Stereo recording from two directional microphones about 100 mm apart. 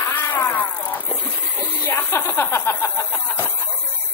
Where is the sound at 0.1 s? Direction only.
20° left (ahead or behind).